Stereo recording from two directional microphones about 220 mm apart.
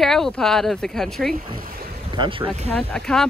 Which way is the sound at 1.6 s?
40° right (ahead or behind).